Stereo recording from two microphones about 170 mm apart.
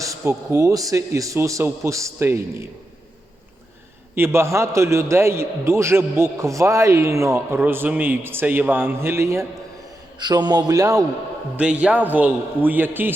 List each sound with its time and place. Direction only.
0.0 s a man's voice: 20° right (ahead or behind)
4.1 s a man's voice: 15° right (ahead or behind)
11.5 s a man's voice: 5° right (ahead or behind)